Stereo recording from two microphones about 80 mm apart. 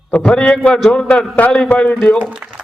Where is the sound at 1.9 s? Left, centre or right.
Centre.